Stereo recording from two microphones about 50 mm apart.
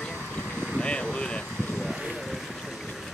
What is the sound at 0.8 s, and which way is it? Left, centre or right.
Vehicle, centre.